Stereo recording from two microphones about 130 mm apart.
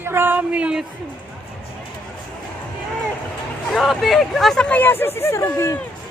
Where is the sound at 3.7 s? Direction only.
Centre (ahead or behind); by 5.8 s 25° left (ahead or behind).